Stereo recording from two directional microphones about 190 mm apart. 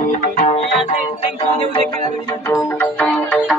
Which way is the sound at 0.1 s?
40° left (ahead or behind).